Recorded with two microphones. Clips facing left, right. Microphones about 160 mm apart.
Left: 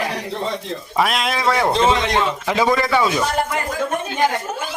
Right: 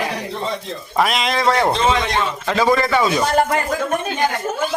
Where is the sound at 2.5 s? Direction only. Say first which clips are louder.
Right 2 dB; 10° left (ahead or behind).